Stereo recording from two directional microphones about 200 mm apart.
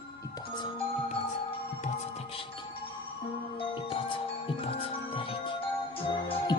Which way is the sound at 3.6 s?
25° left (ahead or behind).